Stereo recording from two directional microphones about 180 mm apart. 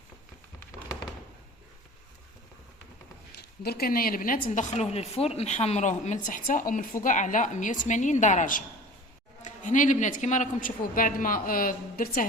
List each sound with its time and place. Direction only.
3.3 s speech: 60° left (ahead or behind)